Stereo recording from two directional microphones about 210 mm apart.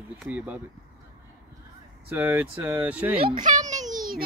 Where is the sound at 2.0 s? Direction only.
10° right (ahead or behind).